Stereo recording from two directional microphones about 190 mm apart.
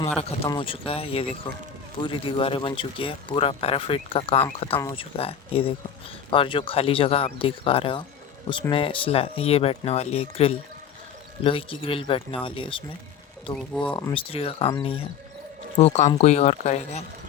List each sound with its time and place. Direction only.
0.4 s speech: 25° left (ahead or behind)
13.6 s speech: 5° left (ahead or behind)
14.1 s speech: 30° left (ahead or behind)